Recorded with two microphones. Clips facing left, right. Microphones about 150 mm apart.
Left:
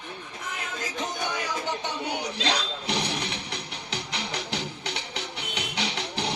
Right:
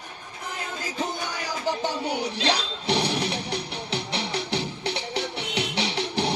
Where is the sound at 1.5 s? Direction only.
35° right (ahead or behind).